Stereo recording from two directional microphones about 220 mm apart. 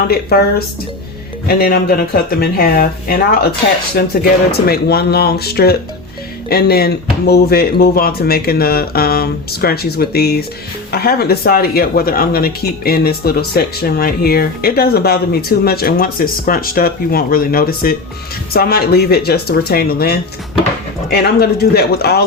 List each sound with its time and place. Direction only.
0.1 s speech: 45° left (ahead or behind)
1.5 s speech: 45° left (ahead or behind)